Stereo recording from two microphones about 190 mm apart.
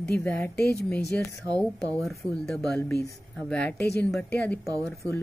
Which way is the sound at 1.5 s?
20° right (ahead or behind).